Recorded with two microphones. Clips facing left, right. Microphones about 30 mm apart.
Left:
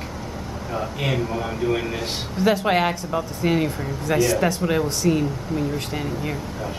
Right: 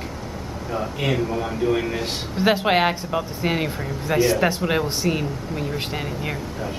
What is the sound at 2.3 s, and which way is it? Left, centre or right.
Speech, right.